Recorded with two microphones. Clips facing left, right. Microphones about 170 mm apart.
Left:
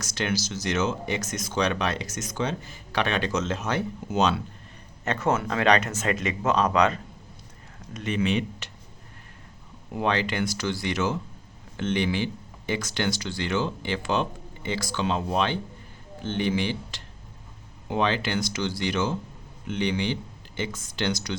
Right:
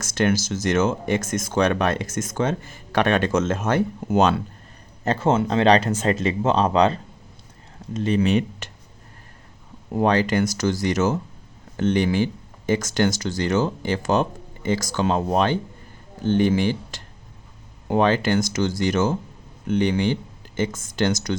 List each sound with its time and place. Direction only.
0.0 s speech: 50° right (ahead or behind)
5.0 s speech: 30° right (ahead or behind); by 8.7 s 45° right (ahead or behind)
9.9 s speech: 40° right (ahead or behind)